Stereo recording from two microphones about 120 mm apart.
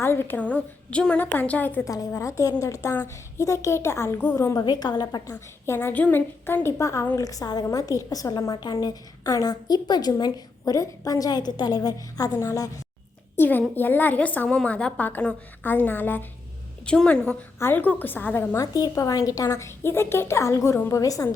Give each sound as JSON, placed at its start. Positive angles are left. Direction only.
{"t": 0.0, "sound": "a woman's voice", "side_deg": 20}
{"t": 1.8, "sound": "a woman's voice", "side_deg": 30}
{"t": 4.6, "sound": "a woman's voice", "side_deg": 35}
{"t": 13.3, "sound": "a woman's voice", "side_deg": 15}
{"t": 18.6, "sound": "a woman's voice", "side_deg": 30}